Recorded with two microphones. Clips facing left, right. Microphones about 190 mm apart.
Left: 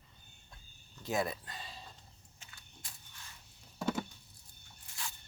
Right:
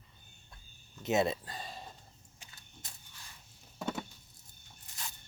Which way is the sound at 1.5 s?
45° right (ahead or behind).